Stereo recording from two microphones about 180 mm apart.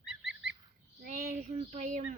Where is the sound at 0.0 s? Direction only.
5° right (ahead or behind).